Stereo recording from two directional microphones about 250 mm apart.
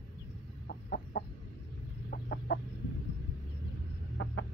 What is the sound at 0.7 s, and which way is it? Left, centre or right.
Chicken, left.